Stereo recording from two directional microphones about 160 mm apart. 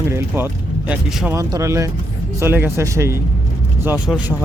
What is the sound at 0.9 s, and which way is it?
Speech, 5° right (ahead or behind).